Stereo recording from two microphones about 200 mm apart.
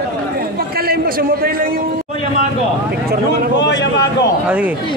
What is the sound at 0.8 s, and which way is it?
A man's voice, 50° right (ahead or behind).